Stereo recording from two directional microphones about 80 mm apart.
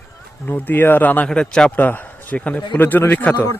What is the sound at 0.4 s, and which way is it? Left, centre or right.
Speech, left.